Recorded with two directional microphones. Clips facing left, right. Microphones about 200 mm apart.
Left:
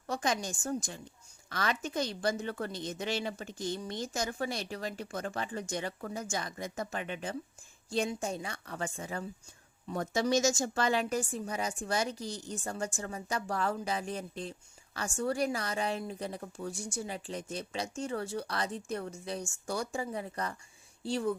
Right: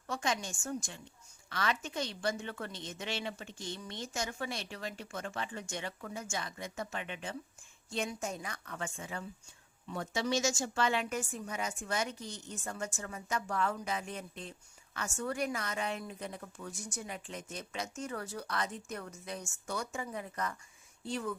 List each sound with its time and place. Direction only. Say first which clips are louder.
0.1 s a woman's voice: left 3 dB; 40° left (ahead or behind)